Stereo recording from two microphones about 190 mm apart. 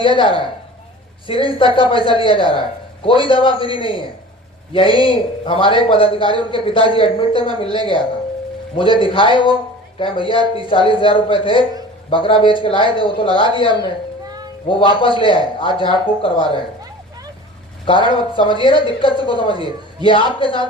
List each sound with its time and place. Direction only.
0.0 s a man's voice: 25° left (ahead or behind)
9.0 s a man's voice: 25° left (ahead or behind)
14.3 s a sound: 20° right (ahead or behind)
14.7 s a man's voice: 25° left (ahead or behind)
17.8 s a man's voice: 25° left (ahead or behind)